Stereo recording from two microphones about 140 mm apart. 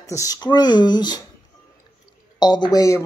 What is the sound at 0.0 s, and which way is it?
Speech, 25° left (ahead or behind).